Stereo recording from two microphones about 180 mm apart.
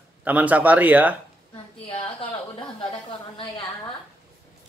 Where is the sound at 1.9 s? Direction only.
30° left (ahead or behind).